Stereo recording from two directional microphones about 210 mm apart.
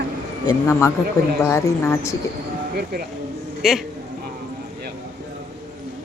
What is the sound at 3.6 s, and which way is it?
Speech, centre (ahead or behind).